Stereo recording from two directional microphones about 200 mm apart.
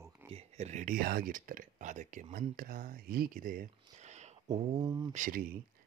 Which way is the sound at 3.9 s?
35° right (ahead or behind).